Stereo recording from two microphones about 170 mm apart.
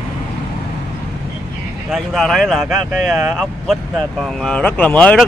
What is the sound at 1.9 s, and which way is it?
Speech, centre (ahead or behind).